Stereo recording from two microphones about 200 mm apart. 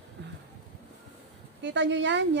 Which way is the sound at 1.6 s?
65° right (ahead or behind).